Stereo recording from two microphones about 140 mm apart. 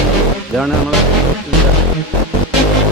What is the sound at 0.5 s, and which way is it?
Speech, centre (ahead or behind).